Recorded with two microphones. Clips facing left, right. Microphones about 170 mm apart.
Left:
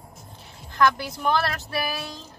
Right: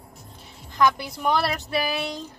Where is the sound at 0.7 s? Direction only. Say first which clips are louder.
Even; 15° right (ahead or behind).